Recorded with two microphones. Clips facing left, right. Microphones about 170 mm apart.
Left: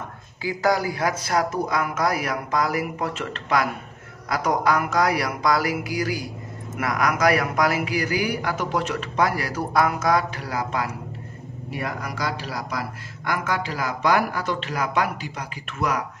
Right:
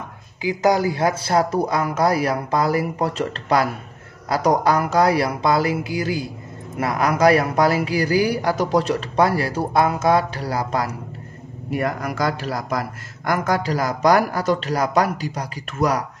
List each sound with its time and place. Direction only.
0.4 s a man's voice: 20° right (ahead or behind); by 10.9 s 35° right (ahead or behind)
11.7 s a man's voice: 50° right (ahead or behind)